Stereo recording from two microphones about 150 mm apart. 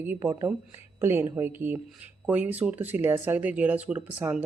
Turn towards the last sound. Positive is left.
turn(degrees=-10)  # may be behind; listen again after turning